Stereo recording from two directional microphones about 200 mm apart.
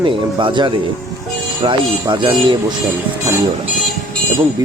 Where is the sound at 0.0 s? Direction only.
25° right (ahead or behind).